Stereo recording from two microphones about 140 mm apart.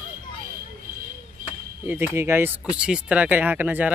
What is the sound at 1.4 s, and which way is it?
Chop, 75° right (ahead or behind).